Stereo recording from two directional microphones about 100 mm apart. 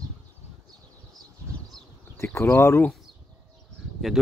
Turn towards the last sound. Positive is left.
turn(degrees=0)  # may be behind; listen again after turning